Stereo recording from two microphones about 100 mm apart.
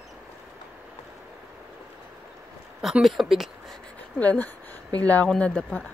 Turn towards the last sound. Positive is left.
turn(degrees=10)  # may be behind; listen again after turning